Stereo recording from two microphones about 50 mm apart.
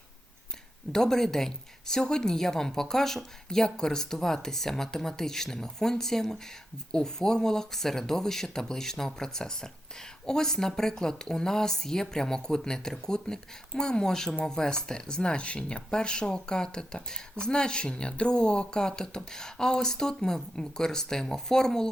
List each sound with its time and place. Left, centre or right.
0.9 s speech: centre